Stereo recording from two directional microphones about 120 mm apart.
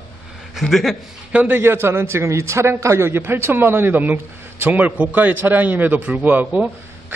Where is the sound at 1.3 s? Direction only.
15° right (ahead or behind).